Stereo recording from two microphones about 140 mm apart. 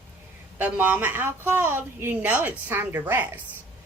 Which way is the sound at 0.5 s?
15° right (ahead or behind).